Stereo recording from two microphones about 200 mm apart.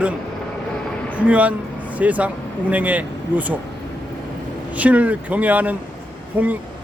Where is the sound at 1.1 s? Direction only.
5° right (ahead or behind).